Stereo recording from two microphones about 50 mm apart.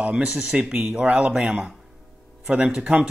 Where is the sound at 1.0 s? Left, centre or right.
Right.